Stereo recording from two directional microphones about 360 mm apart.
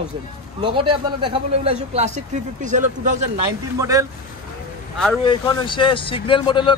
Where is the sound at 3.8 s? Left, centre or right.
Centre.